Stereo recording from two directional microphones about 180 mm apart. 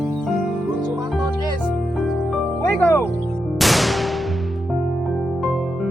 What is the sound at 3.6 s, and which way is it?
Music, centre (ahead or behind).